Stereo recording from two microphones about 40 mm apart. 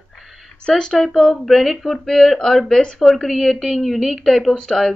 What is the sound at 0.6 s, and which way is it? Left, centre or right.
Speech, left.